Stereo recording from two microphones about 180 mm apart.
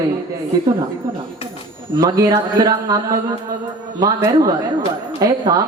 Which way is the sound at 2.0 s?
20° right (ahead or behind).